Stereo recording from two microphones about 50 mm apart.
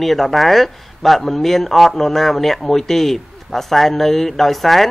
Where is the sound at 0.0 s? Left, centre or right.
Centre.